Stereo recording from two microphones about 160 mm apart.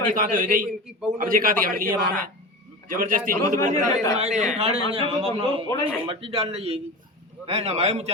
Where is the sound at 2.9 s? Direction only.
60° right (ahead or behind).